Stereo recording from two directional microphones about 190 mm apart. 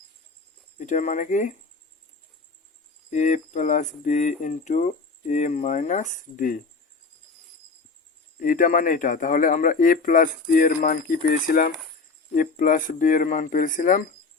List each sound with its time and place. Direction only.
0.8 s speech: 40° left (ahead or behind)
3.1 s speech: 40° left (ahead or behind)
8.4 s speech: 45° left (ahead or behind)